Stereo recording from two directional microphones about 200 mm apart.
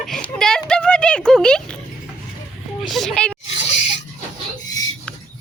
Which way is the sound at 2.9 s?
Centre (ahead or behind).